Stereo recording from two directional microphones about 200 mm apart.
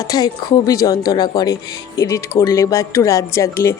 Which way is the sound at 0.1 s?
20° left (ahead or behind).